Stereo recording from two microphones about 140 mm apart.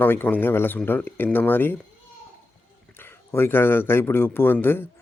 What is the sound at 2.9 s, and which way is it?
Speech, 15° left (ahead or behind).